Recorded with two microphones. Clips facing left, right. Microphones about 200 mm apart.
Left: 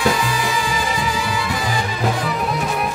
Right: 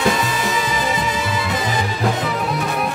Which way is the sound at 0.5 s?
20° right (ahead or behind).